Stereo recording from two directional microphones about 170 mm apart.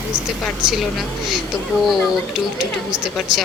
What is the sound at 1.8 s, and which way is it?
Speech, centre (ahead or behind).